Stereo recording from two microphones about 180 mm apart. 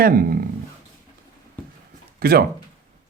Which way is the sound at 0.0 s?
55° right (ahead or behind).